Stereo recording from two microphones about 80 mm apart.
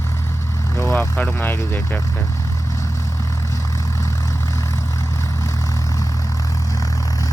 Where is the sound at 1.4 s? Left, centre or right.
Left.